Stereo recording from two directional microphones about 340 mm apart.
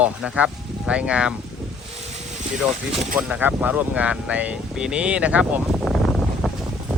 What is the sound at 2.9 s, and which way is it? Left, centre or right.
Speech, right.